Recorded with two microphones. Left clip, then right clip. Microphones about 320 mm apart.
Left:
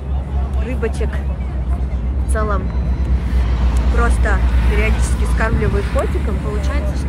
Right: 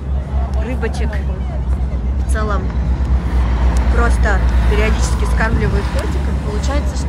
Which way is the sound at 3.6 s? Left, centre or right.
Right.